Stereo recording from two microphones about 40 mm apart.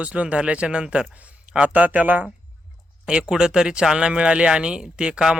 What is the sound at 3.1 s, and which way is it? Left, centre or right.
Speech, right.